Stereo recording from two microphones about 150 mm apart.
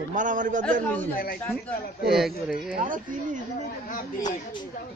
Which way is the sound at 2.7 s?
65° right (ahead or behind).